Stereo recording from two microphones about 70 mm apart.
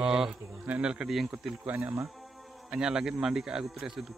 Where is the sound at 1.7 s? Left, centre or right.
Right.